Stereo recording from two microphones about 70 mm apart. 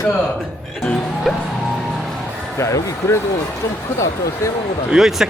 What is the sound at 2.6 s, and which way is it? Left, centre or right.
Speech, left.